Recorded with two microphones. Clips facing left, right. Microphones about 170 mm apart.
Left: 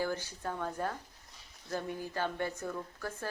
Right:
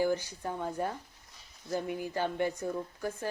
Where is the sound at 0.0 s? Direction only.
15° right (ahead or behind).